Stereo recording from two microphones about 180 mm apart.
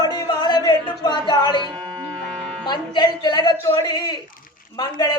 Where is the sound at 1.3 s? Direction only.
25° left (ahead or behind).